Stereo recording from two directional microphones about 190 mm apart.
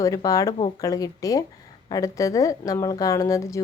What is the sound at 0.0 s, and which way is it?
A woman's voice, 20° left (ahead or behind).